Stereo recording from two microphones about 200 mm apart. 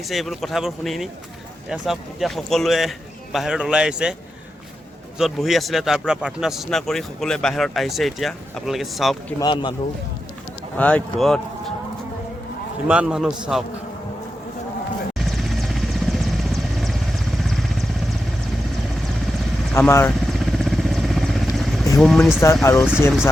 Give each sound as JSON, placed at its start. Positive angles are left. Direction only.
{"t": 0.1, "sound": "a man's voice", "side_deg": 0}
{"t": 5.1, "sound": "a man's voice", "side_deg": 0}
{"t": 9.4, "sound": "speech", "side_deg": 25}
{"t": 10.8, "sound": "a man's voice", "side_deg": 5}
{"t": 12.9, "sound": "a man's voice", "side_deg": -5}
{"t": 15.2, "sound": "vehicle", "side_deg": 0}
{"t": 19.7, "sound": "speech", "side_deg": 10}
{"t": 20.3, "sound": "vehicle", "side_deg": 0}
{"t": 22.0, "sound": "a man's voice", "side_deg": 0}
{"t": 22.6, "sound": "speech", "side_deg": 15}